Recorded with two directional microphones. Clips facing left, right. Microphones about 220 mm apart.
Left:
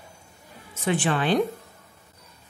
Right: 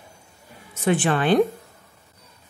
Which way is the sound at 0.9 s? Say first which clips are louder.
Right 3 dB; 55° right (ahead or behind).